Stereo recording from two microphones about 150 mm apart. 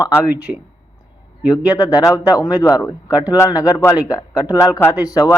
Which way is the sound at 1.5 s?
25° left (ahead or behind).